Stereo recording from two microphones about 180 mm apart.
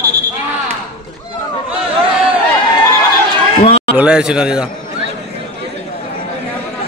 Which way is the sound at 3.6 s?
35° left (ahead or behind).